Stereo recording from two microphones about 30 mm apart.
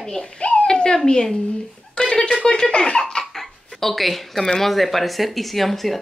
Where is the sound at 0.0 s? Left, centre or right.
Centre.